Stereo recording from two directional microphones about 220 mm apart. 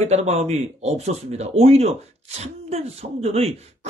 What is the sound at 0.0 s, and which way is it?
Speech, 30° right (ahead or behind).